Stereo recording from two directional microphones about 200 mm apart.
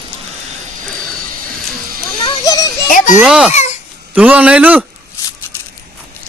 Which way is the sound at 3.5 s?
35° left (ahead or behind).